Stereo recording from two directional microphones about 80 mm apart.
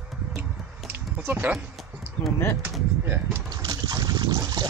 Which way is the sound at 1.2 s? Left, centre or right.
Right.